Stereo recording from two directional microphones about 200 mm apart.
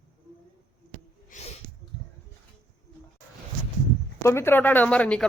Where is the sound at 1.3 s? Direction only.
40° left (ahead or behind).